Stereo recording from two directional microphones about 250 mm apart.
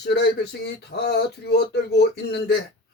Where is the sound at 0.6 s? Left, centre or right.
Left.